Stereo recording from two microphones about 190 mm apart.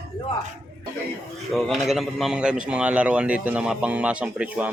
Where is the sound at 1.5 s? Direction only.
Centre (ahead or behind).